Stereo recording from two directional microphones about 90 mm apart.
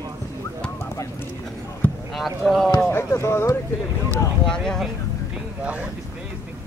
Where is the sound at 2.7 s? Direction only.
30° left (ahead or behind).